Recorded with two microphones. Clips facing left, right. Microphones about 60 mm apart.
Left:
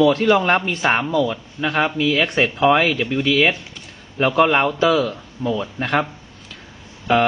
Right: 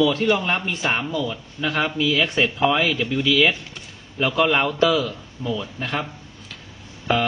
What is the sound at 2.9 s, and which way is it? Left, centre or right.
Speech, left.